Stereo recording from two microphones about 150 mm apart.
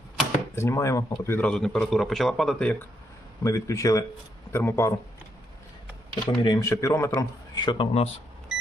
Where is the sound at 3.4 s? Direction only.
20° left (ahead or behind).